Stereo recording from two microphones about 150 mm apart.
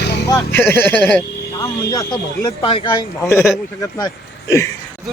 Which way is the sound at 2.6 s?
35° left (ahead or behind).